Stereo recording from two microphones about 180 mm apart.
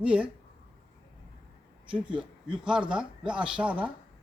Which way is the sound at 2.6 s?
5° right (ahead or behind).